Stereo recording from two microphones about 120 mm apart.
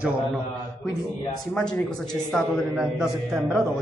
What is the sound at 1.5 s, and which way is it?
A man's voice, 5° left (ahead or behind).